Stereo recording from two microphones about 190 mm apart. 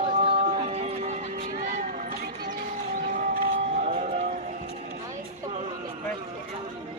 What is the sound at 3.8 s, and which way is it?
Music, 40° right (ahead or behind).